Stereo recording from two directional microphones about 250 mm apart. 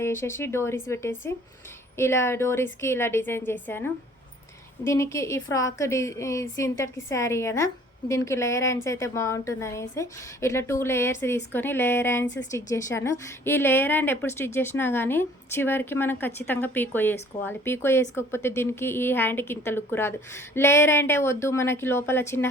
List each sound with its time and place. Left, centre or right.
0.0 s a woman's voice: centre